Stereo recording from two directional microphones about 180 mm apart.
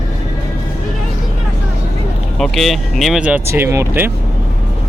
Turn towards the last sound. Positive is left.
turn(degrees=-15)  # may be behind; listen again after turning